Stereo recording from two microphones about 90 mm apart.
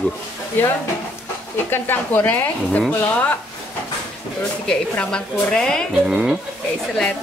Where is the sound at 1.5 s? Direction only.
25° left (ahead or behind).